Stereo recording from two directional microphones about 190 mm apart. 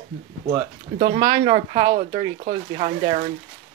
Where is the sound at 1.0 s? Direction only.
30° right (ahead or behind).